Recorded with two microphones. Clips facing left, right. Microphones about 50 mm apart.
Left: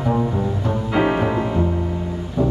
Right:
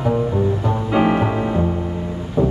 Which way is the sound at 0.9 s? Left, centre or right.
Centre.